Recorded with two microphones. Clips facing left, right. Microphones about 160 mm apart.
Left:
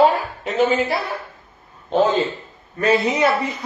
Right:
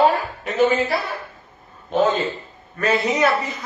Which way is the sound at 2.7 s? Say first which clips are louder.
Left 2 dB; 25° left (ahead or behind).